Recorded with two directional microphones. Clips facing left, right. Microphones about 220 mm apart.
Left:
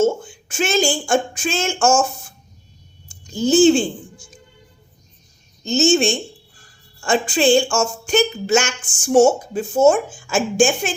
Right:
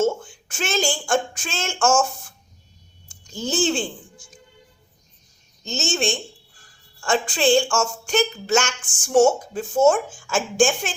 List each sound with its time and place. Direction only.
0.4 s a woman's voice: 10° left (ahead or behind)
3.3 s a woman's voice: centre (ahead or behind)
5.6 s a woman's voice: 5° left (ahead or behind)